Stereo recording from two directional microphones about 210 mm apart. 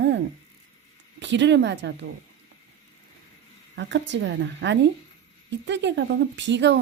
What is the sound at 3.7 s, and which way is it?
Speech, 55° right (ahead or behind).